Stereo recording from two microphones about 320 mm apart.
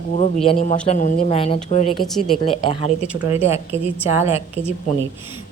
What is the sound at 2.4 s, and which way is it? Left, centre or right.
Speech, centre.